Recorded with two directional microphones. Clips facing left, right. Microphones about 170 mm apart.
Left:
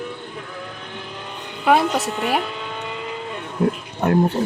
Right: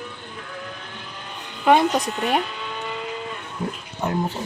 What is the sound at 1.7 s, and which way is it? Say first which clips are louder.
Speech: even; 5° left (ahead or behind).